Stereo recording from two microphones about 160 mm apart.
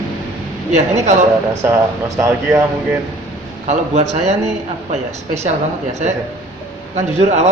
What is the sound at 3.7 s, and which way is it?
Speech, 45° right (ahead or behind).